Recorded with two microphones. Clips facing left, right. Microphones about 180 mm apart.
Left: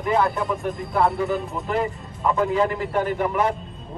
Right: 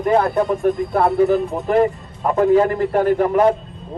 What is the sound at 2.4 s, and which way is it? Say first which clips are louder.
Speech: right 9 dB; 50° right (ahead or behind).